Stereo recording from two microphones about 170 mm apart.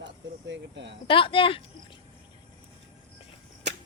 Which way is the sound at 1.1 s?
30° left (ahead or behind).